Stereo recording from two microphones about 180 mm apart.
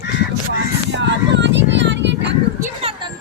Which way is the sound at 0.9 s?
80° right.